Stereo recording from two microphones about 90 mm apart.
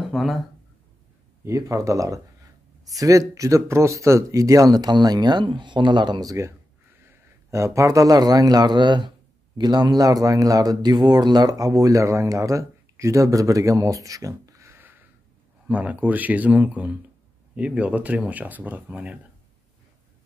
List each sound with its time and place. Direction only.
0.0 s a sound: centre (ahead or behind)
1.4 s a man's voice: 35° right (ahead or behind); by 6.3 s 55° right (ahead or behind)
7.1 s a man's voice: 35° right (ahead or behind); by 19.1 s 15° right (ahead or behind)